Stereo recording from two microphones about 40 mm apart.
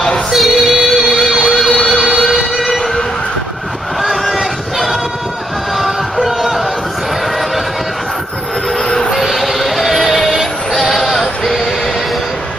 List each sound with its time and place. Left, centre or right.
0.3 s child singing: centre
1.3 s emergency vehicle: left
2.5 s siren: centre
4.0 s a sound: centre
5.8 s music: centre
8.8 s a sound: centre
9.2 s music: centre